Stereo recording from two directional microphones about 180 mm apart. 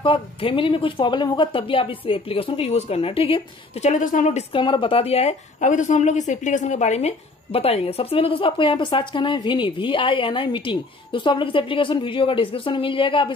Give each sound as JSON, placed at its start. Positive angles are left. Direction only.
{"t": 0.0, "sound": "speech", "side_deg": 30}
{"t": 3.9, "sound": "speech", "side_deg": 45}